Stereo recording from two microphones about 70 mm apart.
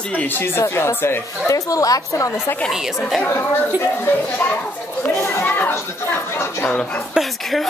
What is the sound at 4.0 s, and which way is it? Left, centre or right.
Speech, left.